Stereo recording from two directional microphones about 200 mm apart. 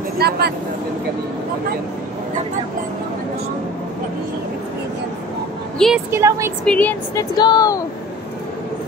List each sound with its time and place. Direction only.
0.2 s speech: 55° right (ahead or behind)
5.8 s a woman's voice: centre (ahead or behind)
6.1 s a woman's voice: 15° right (ahead or behind)
6.6 s a woman's voice: 5° left (ahead or behind)
7.3 s speech: 20° left (ahead or behind)